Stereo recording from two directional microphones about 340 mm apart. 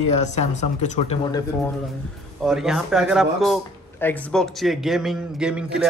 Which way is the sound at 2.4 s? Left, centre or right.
Centre.